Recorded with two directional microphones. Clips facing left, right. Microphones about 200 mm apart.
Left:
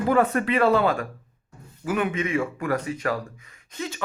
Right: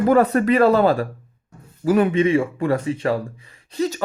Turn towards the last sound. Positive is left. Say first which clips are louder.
# right 10 dB
turn(degrees=-40)  # may be behind; listen again after turning